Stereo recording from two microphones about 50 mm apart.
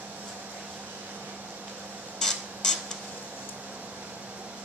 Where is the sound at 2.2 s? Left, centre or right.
Centre.